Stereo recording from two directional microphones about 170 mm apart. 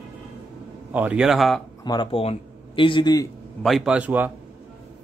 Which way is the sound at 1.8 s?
30° left (ahead or behind).